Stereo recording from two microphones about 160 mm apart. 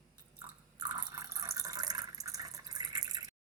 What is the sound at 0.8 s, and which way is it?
Water, 20° right (ahead or behind).